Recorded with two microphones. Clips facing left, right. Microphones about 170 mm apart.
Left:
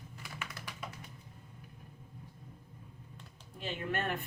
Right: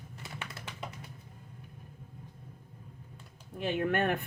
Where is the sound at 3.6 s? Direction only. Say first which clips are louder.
Right 7 dB; 60° right (ahead or behind).